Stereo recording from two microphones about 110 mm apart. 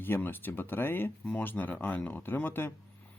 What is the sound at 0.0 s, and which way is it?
Speech, 20° left (ahead or behind).